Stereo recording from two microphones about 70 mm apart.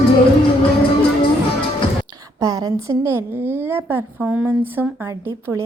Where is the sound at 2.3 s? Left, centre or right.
Right.